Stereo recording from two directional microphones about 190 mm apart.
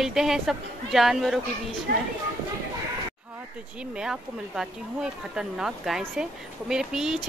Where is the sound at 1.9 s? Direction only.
55° right (ahead or behind).